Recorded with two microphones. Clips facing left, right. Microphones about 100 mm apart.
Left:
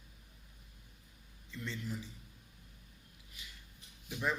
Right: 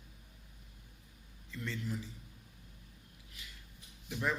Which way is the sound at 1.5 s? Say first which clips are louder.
Right 2 dB; 20° left (ahead or behind).